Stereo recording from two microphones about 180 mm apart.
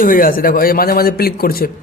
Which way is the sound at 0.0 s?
50° left (ahead or behind).